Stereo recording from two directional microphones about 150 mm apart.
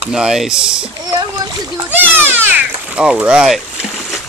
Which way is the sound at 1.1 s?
25° right (ahead or behind).